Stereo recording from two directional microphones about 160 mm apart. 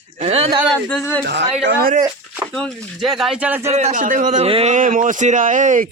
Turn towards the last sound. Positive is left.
turn(degrees=-55)  # may be behind; listen again after turning